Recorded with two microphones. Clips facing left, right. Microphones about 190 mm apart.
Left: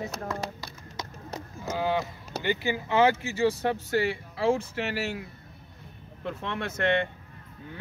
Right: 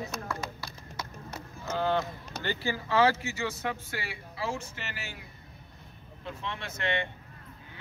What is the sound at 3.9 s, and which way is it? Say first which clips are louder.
Speech: left 12 dB; 45° left (ahead or behind).